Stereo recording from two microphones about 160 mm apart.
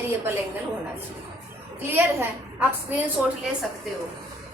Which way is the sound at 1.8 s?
15° right (ahead or behind).